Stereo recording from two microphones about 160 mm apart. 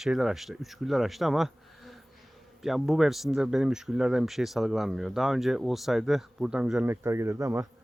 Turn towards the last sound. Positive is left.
turn(degrees=-15)  # may be behind; listen again after turning